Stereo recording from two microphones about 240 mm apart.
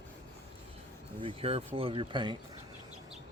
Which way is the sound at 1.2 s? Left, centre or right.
Right.